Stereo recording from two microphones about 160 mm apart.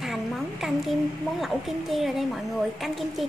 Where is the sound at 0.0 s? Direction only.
Centre (ahead or behind).